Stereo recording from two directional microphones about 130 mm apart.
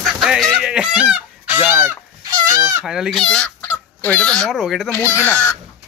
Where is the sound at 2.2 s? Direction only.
30° right (ahead or behind).